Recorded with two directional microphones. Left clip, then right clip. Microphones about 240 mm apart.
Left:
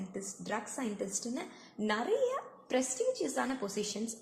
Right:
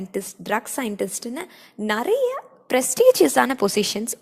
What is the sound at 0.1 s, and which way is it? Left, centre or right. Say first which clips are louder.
A woman's voice: right 14 dB; right.